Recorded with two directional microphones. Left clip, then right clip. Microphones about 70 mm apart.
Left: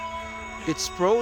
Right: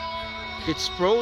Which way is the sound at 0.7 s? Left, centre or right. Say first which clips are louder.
Right 1 dB; left.